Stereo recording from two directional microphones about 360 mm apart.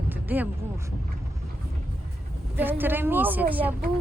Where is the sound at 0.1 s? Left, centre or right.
Centre.